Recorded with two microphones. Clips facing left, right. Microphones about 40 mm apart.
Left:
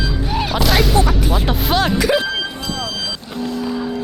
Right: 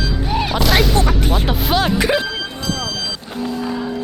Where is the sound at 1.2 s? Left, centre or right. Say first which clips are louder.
Even; right.